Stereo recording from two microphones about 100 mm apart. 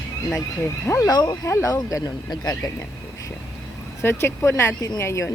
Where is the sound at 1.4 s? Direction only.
30° left (ahead or behind).